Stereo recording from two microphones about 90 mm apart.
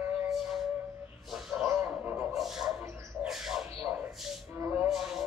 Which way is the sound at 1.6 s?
20° right (ahead or behind).